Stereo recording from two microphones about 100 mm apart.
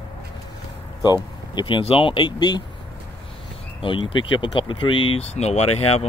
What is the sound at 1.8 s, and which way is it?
Speech, 70° left (ahead or behind).